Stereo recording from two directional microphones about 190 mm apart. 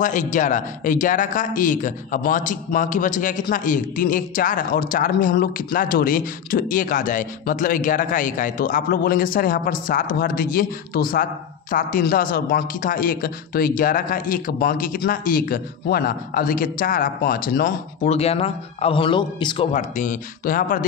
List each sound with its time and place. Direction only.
0.0 s speech: 40° left (ahead or behind)
18.0 s a man's voice: 35° left (ahead or behind)
19.7 s speech: 45° left (ahead or behind)